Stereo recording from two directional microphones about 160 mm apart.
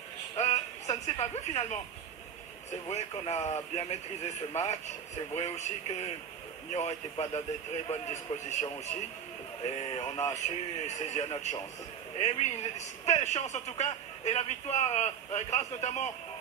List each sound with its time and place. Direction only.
0.4 s speech: 45° left (ahead or behind)
2.9 s a man's voice: 45° left (ahead or behind)